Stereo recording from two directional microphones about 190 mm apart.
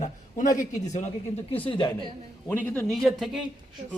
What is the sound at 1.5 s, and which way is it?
Speech, 25° left (ahead or behind).